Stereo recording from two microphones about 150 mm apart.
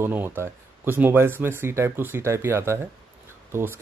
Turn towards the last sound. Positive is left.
turn(degrees=-15)  # may be behind; listen again after turning